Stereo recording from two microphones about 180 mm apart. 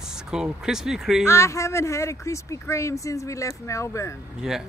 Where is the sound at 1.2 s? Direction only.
15° left (ahead or behind).